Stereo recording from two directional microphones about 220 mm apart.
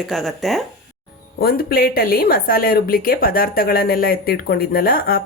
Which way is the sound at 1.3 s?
45° left (ahead or behind).